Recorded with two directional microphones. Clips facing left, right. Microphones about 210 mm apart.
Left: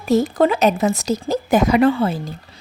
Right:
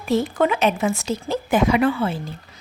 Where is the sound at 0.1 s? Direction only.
40° left (ahead or behind).